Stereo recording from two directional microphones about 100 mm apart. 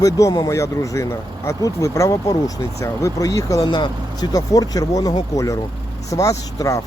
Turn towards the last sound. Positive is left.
turn(degrees=35)  # may be behind; listen again after turning